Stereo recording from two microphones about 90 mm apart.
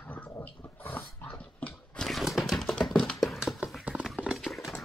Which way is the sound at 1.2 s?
15° left (ahead or behind).